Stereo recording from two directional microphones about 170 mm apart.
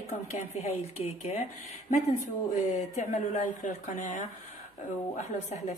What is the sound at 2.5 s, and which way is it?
Speech, 45° left (ahead or behind).